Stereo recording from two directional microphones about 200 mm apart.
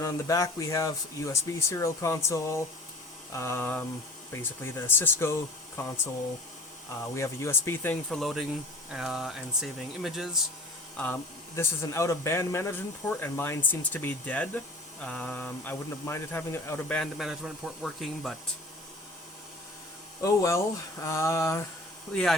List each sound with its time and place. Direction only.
0.0 s a man's voice: 15° left (ahead or behind)
7.1 s a man's voice: 15° left (ahead or behind); by 10.4 s centre (ahead or behind)
10.9 s a man's voice: 10° left (ahead or behind)
20.2 s a man's voice: 15° left (ahead or behind)
22.1 s speech: 5° left (ahead or behind)